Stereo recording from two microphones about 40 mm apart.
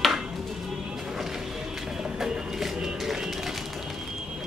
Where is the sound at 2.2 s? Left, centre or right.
Centre.